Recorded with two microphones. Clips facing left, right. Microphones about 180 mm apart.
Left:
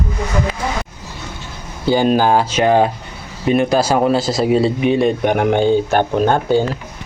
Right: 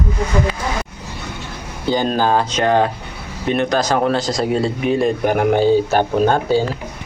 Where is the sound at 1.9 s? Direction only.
10° left (ahead or behind).